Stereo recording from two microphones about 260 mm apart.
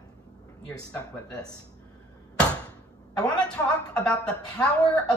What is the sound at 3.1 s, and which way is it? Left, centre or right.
Speech, centre.